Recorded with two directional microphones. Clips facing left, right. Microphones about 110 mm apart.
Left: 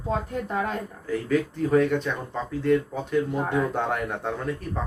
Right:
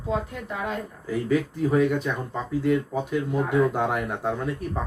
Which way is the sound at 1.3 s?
5° right (ahead or behind).